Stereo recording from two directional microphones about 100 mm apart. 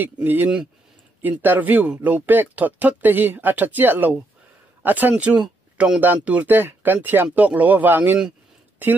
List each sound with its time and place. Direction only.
0.0 s speech: 20° right (ahead or behind)